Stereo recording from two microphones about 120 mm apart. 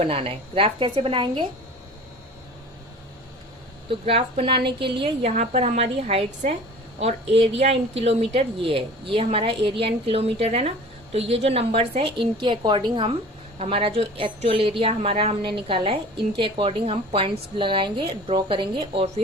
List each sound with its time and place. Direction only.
0.0 s a woman's voice: 50° right (ahead or behind)
3.8 s a woman's voice: 55° right (ahead or behind)
5.3 s a woman's voice: 80° right; by 6.2 s 60° right (ahead or behind)
7.6 s a woman's voice: 55° right (ahead or behind); by 13.1 s 40° right (ahead or behind)
13.6 s a woman's voice: 55° right (ahead or behind)